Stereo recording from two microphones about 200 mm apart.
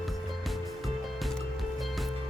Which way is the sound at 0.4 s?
Centre (ahead or behind).